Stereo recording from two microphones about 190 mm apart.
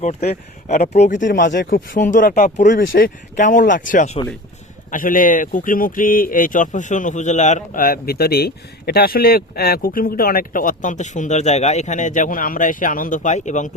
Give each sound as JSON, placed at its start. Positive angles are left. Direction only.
{"t": 0.0, "sound": "speech", "side_deg": 35}
{"t": 1.4, "sound": "speech", "side_deg": 55}